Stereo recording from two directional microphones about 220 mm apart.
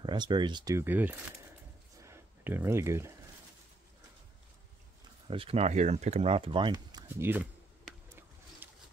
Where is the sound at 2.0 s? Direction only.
10° right (ahead or behind).